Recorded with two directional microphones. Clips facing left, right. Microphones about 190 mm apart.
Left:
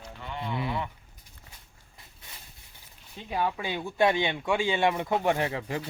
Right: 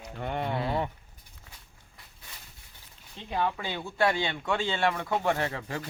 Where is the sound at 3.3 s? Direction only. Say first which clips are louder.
Left 1 dB; 10° left (ahead or behind).